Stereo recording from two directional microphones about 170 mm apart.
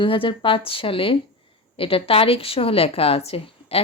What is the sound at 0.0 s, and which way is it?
A woman's voice, 30° left (ahead or behind).